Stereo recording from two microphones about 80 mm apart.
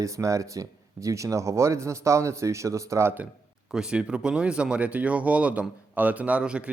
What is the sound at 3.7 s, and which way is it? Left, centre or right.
A man's voice, centre.